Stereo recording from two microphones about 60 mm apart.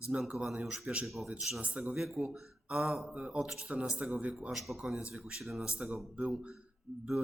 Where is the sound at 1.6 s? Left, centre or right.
Right.